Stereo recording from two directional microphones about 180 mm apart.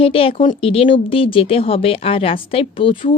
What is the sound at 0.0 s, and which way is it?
Speech, 30° left (ahead or behind).